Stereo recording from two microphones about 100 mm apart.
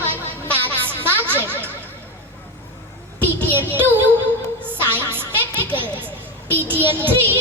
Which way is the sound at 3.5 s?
20° right (ahead or behind).